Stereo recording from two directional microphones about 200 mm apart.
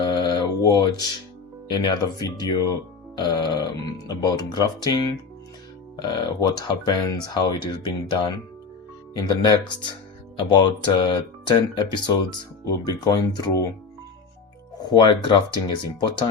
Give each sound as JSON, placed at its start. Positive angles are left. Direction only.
{"t": 0.0, "sound": "mantra", "side_deg": 20}
{"t": 1.6, "sound": "speech", "side_deg": 20}
{"t": 6.0, "sound": "speech", "side_deg": 20}
{"t": 14.8, "sound": "speech", "side_deg": 20}